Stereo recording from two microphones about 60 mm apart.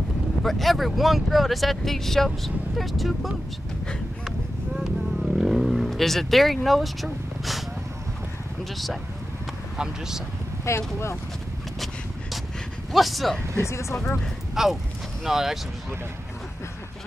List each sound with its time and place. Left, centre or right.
0.4 s speech: centre
4.7 s vehicle: centre
9.8 s speech: centre
10.6 s speech: left
12.9 s speech: centre
13.6 s speech: left
14.5 s speech: centre